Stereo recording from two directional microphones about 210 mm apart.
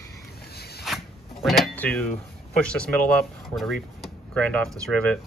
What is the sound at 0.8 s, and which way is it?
Zipper, centre (ahead or behind).